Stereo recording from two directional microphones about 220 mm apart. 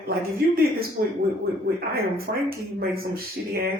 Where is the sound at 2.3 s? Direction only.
45° right (ahead or behind).